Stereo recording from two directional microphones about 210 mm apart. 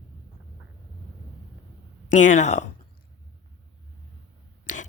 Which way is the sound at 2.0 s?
35° left (ahead or behind).